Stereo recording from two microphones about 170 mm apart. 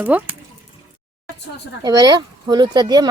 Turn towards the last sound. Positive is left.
turn(degrees=-25)  # may be behind; listen again after turning